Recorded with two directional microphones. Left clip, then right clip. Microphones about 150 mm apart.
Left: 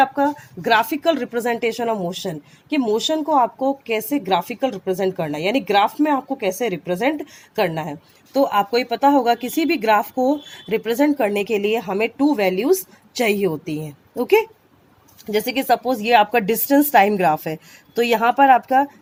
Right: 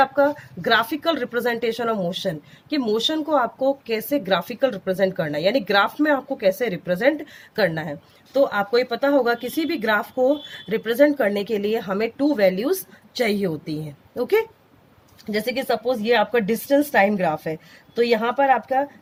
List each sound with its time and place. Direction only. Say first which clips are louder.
0.0 s a woman's voice: left 1 dB; 25° left (ahead or behind)
15.3 s speech: left 4 dB; 40° left (ahead or behind)